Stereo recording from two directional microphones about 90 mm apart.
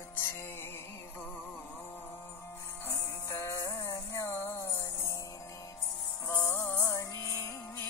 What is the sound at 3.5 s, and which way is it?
Music, 40° left (ahead or behind).